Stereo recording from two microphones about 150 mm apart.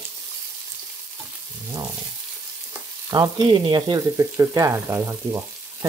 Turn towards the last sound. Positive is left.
turn(degrees=-20)  # may be behind; listen again after turning